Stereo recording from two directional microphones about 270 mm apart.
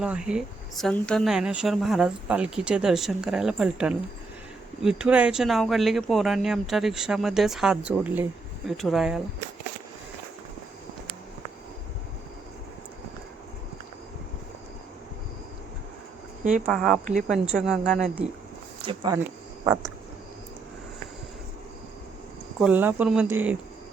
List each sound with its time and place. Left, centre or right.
0.0 s speech: centre
16.4 s speech: right
16.6 s speech: centre
18.9 s speech: centre
22.6 s speech: centre